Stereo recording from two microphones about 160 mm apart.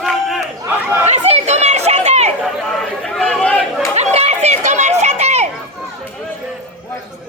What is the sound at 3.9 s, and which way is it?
Chatter, 40° right (ahead or behind).